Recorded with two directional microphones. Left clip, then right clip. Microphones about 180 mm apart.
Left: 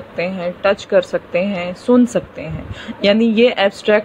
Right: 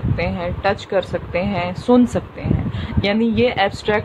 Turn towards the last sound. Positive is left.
turn(degrees=10)  # may be behind; listen again after turning